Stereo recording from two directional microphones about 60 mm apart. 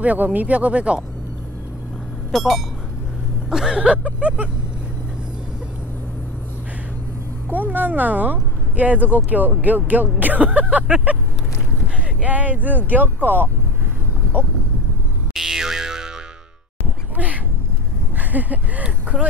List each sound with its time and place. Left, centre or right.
0.0 s speech: right
2.3 s a sound: centre; by 4.5 s right
7.4 s speech: right
12.2 s speech: right
15.3 s music: centre
18.1 s speech: right